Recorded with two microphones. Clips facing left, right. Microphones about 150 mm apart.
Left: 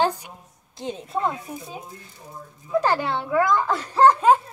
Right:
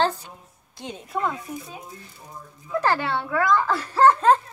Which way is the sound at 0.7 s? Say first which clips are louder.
Left 2 dB; 25° left (ahead or behind).